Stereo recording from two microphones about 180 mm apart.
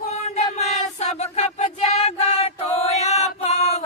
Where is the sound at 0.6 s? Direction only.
35° left (ahead or behind).